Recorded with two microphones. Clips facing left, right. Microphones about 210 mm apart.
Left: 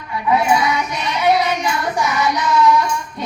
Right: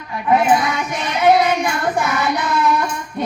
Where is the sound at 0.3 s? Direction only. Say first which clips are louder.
Right 1 dB; 50° right (ahead or behind).